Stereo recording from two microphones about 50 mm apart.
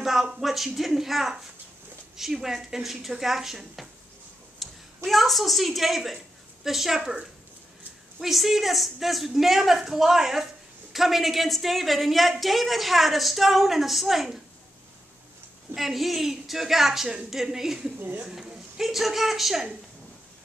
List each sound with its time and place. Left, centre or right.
0.0 s a woman's voice: centre
7.0 s speech: centre
8.2 s a woman's voice: centre
15.7 s a woman's voice: centre